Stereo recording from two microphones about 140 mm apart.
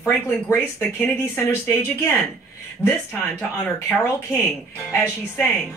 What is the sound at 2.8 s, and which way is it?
Speech, 15° left (ahead or behind).